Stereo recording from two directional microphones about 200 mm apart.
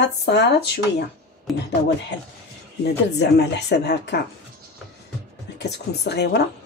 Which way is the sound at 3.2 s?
55° left (ahead or behind).